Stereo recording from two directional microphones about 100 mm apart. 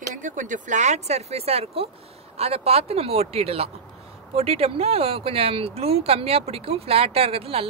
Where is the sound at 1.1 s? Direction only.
90° right.